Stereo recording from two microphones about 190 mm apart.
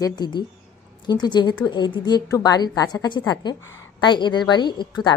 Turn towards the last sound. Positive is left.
turn(degrees=25)  # may be behind; listen again after turning